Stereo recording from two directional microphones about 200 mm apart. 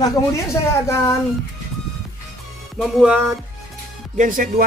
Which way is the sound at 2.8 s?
5° right (ahead or behind).